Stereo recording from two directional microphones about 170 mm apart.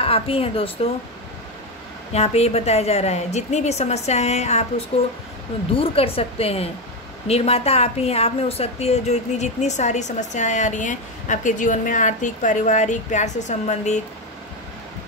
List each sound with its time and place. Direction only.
0.0 s a woman's voice: 35° left (ahead or behind)
2.1 s a woman's voice: 40° left (ahead or behind)